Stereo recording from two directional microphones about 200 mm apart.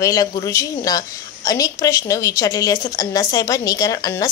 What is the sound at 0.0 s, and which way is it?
A woman's voice, 20° left (ahead or behind).